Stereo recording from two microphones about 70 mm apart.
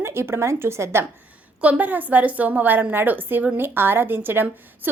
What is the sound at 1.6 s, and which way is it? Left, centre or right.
A woman's voice, right.